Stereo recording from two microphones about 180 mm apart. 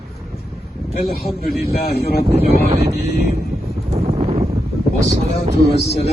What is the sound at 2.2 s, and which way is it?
Speech, 35° right (ahead or behind).